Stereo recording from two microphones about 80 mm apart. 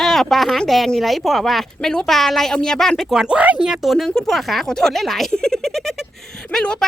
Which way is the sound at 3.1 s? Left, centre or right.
Centre.